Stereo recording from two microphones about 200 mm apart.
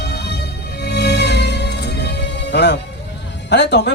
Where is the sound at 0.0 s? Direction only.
55° left (ahead or behind).